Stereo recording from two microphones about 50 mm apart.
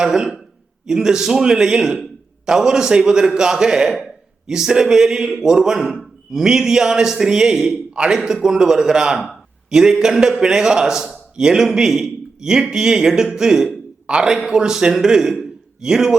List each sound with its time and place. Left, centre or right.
0.0 s a man's voice: centre